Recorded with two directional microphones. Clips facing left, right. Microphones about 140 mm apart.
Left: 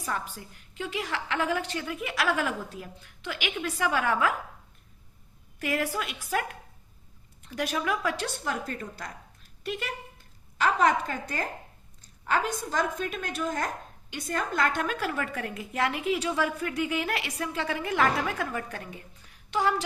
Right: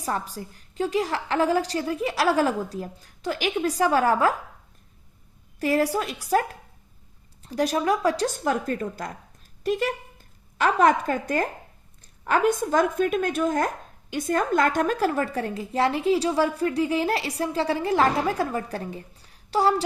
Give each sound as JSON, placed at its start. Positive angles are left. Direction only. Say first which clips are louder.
{"t": 0.0, "sound": "a woman's voice", "louder": "right 5 dB", "side_deg": -35}
{"t": 5.5, "sound": "a woman's voice", "louder": "right 7 dB", "side_deg": -35}